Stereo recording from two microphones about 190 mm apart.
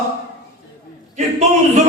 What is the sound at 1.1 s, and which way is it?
Speech, 40° right (ahead or behind).